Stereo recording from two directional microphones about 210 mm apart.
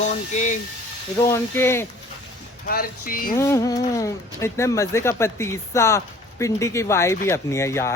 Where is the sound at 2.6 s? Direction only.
45° left (ahead or behind).